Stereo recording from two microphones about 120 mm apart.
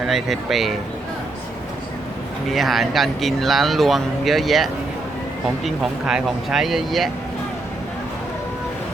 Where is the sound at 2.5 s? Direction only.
Centre (ahead or behind).